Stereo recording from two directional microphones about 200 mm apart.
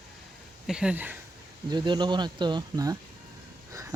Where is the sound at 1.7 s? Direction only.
20° right (ahead or behind).